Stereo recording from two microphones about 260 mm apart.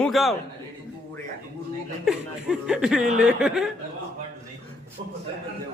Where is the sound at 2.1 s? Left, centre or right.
Centre.